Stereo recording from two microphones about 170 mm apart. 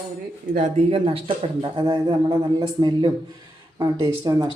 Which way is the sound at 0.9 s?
35° right (ahead or behind).